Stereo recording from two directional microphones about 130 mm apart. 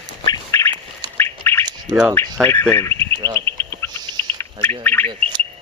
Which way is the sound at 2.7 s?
20° left (ahead or behind).